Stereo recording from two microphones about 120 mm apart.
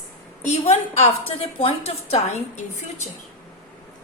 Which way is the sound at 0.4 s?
65° left (ahead or behind).